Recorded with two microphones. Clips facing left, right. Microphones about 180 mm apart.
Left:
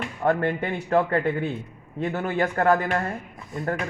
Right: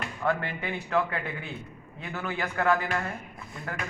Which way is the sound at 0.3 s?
50° left (ahead or behind).